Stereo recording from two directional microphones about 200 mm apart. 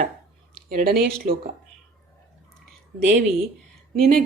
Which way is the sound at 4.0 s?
45° right (ahead or behind).